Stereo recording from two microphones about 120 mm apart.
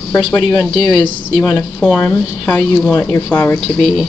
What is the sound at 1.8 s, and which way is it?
Speech, 5° left (ahead or behind).